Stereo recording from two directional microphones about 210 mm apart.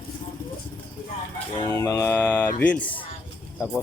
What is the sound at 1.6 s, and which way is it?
Speech, 15° left (ahead or behind).